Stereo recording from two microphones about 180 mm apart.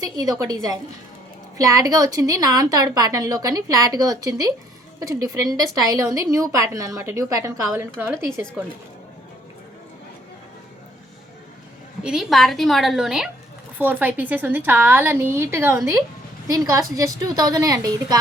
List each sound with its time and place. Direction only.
0.0 s a woman's voice: 20° right (ahead or behind)
12.0 s a woman's voice: centre (ahead or behind); by 18.2 s 20° right (ahead or behind)